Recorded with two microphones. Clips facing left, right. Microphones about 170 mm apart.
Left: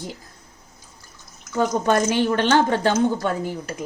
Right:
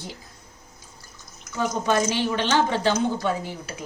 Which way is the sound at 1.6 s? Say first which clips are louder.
Left 3 dB; 50° left (ahead or behind).